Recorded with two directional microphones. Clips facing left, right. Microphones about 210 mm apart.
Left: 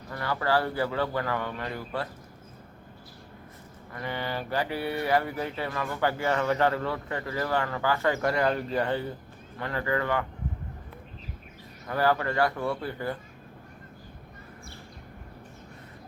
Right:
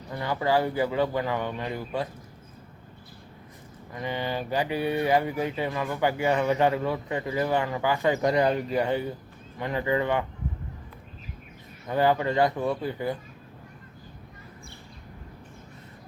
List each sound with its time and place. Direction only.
0.1 s speech: 15° right (ahead or behind)
3.9 s speech: 15° right (ahead or behind)
11.9 s speech: 20° right (ahead or behind)